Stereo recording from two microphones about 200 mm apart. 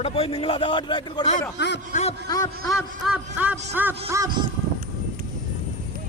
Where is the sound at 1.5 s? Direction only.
60° left (ahead or behind).